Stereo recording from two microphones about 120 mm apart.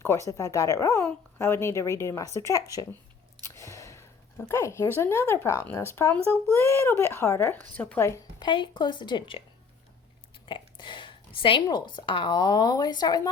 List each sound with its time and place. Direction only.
0.0 s speech: 25° left (ahead or behind)
3.4 s a sound: 25° left (ahead or behind)
5.7 s speech: 20° left (ahead or behind)
8.4 s a woman's voice: 40° left (ahead or behind)
10.4 s a woman's voice: 40° left (ahead or behind)